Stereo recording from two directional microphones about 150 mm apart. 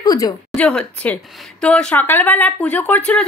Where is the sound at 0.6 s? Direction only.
5° left (ahead or behind).